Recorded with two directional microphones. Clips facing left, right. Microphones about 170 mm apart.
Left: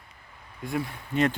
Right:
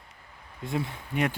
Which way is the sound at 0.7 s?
25° right (ahead or behind).